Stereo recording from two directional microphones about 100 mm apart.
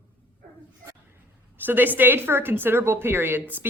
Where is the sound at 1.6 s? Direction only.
20° right (ahead or behind).